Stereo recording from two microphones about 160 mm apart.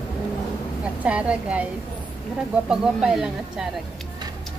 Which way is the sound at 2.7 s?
5° right (ahead or behind).